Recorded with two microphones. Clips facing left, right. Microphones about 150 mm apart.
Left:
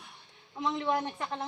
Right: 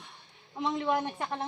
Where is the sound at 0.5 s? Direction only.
15° right (ahead or behind).